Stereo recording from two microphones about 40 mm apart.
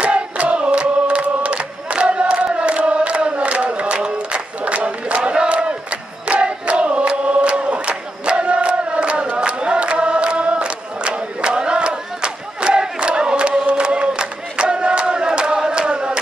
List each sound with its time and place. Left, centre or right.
0.0 s chant: right